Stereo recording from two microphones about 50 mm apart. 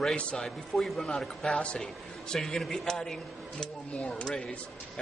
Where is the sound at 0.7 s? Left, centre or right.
Centre; by 2.3 s left.